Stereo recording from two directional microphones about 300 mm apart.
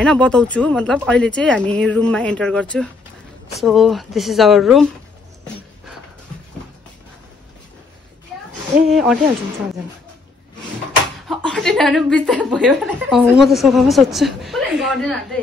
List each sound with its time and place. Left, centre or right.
0.0 s a woman's voice: centre
8.7 s a woman's voice: centre
11.2 s a woman's voice: centre